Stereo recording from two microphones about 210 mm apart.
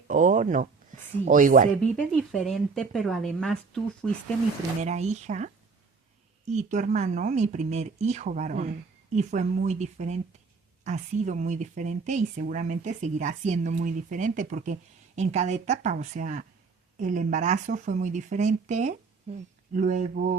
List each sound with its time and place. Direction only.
0.1 s speech: 40° right (ahead or behind)
2.0 s speech: 5° left (ahead or behind)
4.8 s speech: 30° right (ahead or behind)